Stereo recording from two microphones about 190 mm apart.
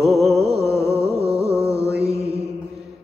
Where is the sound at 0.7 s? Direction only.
15° left (ahead or behind).